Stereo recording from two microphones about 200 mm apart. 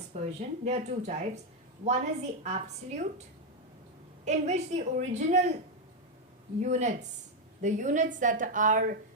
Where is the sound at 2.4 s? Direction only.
35° right (ahead or behind).